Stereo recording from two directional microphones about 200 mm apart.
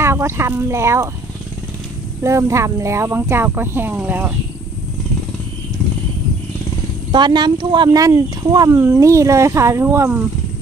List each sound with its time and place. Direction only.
0.0 s speech: 15° right (ahead or behind)
2.2 s speech: 15° right (ahead or behind)
7.1 s speech: 20° right (ahead or behind)